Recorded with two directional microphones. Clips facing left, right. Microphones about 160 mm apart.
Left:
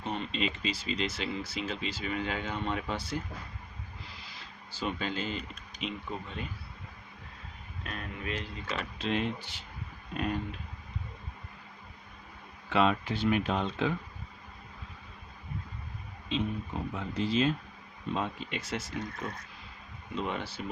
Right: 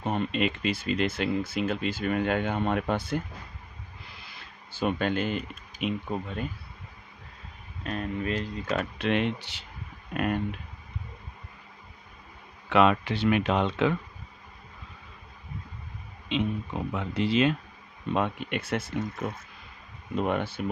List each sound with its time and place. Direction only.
0.0 s speech: 50° right (ahead or behind)
4.2 s a sound: 55° right (ahead or behind)
5.8 s speech: 50° right (ahead or behind)
7.9 s speech: 40° right (ahead or behind)
9.0 s speech: 70° right (ahead or behind)
10.2 s speech: 60° right (ahead or behind)
12.6 s speech: 70° right (ahead or behind)
16.3 s speech: 75° right (ahead or behind)
18.1 s speech: 60° right (ahead or behind)
20.1 s speech: 55° right (ahead or behind)